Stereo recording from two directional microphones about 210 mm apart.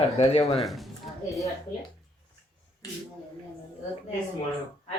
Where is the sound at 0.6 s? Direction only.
Centre (ahead or behind).